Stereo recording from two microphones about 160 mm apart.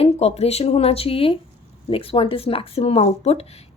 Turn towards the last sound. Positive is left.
turn(degrees=40)  # may be behind; listen again after turning